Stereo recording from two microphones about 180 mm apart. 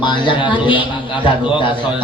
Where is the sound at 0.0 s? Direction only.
25° left (ahead or behind).